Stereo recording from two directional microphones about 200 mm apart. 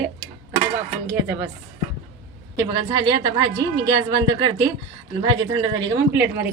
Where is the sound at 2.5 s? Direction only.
20° right (ahead or behind).